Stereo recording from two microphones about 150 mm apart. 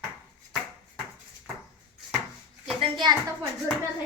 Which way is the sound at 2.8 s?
30° right (ahead or behind).